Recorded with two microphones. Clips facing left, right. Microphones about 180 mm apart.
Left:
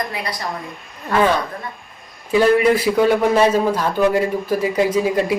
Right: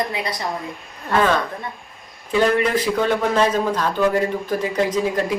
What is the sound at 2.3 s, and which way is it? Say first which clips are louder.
A man's voice: left 4 dB; 10° left (ahead or behind).